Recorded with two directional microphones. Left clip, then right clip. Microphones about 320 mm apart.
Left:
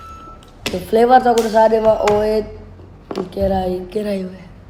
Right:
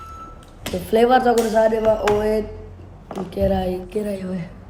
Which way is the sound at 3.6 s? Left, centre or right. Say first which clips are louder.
Left 4 dB; centre.